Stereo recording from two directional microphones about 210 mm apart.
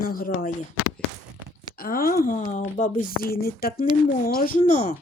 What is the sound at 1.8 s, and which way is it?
Speech, 45° left (ahead or behind).